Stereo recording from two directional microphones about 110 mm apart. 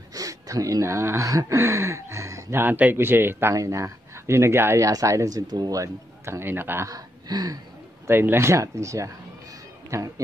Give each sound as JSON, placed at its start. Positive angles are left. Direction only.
{"t": 0.1, "sound": "speech", "side_deg": -30}
{"t": 6.9, "sound": "speech", "side_deg": -35}
{"t": 8.1, "sound": "speech", "side_deg": -20}